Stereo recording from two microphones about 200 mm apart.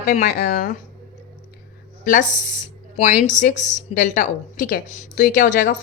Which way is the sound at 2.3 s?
40° left (ahead or behind).